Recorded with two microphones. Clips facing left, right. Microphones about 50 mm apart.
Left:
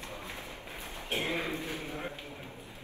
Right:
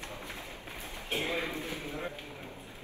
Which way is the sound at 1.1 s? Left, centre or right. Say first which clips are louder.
Even; left.